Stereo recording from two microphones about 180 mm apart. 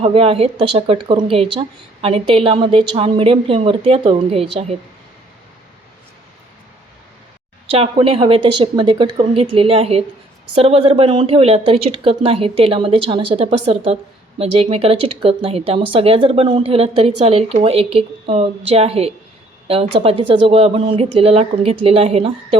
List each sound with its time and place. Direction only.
0.0 s a woman's voice: 30° right (ahead or behind)
7.7 s a woman's voice: 30° right (ahead or behind)